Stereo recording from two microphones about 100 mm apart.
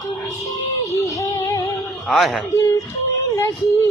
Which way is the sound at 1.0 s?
35° left (ahead or behind).